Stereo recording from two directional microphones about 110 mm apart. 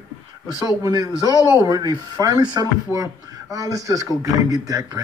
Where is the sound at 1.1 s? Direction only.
30° left (ahead or behind).